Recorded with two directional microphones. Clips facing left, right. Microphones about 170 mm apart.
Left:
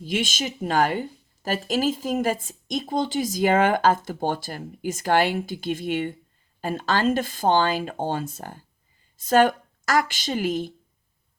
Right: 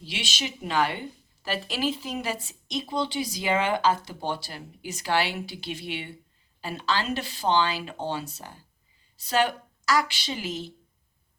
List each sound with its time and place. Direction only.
0.0 s a woman's voice: 50° left (ahead or behind)